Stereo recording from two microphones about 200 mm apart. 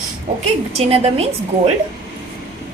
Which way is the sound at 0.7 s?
30° right (ahead or behind).